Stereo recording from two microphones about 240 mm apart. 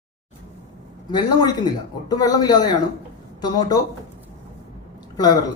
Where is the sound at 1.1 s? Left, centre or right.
Centre.